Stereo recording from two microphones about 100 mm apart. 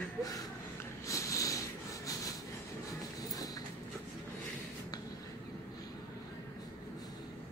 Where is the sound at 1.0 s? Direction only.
30° left (ahead or behind).